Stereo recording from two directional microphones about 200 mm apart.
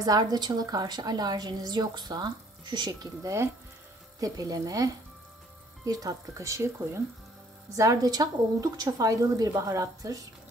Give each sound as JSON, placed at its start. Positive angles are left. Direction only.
{"t": 0.0, "sound": "a woman's voice", "side_deg": -20}